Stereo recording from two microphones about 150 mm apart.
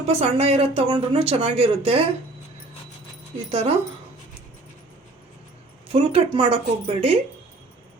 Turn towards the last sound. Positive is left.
turn(degrees=-40)  # may be behind; listen again after turning